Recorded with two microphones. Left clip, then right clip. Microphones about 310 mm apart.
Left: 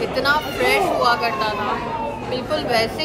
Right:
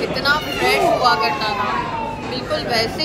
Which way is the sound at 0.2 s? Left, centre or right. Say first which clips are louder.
Even; centre.